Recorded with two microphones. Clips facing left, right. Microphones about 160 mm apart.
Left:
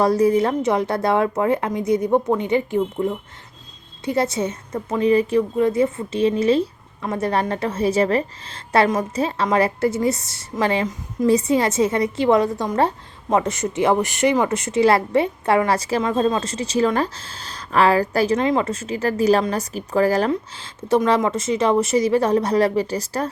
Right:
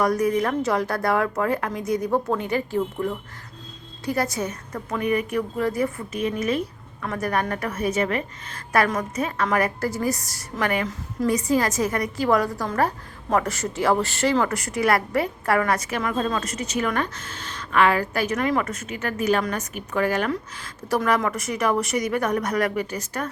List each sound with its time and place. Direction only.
0.0 s a woman's voice: 30° left (ahead or behind)
20.3 s a woman's voice: 25° left (ahead or behind)